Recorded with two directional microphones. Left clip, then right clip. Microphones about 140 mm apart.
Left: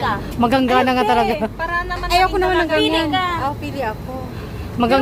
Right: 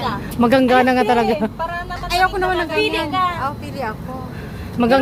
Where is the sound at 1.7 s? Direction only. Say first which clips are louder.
Left 4 dB; 25° left (ahead or behind).